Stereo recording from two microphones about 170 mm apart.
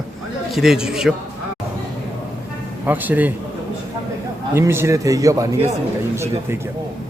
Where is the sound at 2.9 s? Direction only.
10° right (ahead or behind).